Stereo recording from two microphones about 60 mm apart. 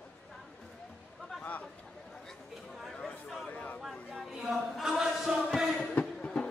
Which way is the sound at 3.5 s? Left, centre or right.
Left.